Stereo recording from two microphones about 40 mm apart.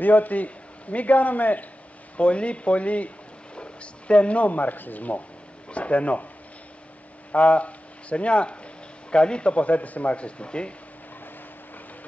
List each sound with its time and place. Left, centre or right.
0.0 s a man's voice: left
2.1 s a man's voice: left
7.3 s a man's voice: left